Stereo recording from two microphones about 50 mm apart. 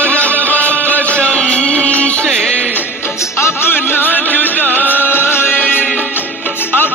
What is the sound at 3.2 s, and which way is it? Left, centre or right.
Music, left.